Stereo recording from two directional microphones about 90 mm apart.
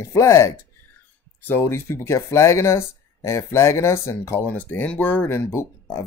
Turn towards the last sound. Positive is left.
turn(degrees=30)  # may be behind; listen again after turning